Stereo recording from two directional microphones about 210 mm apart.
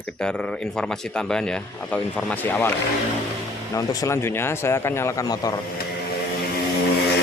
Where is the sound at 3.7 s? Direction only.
15° left (ahead or behind).